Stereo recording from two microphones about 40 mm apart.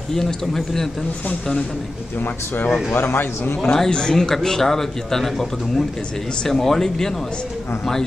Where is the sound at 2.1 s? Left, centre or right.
Left.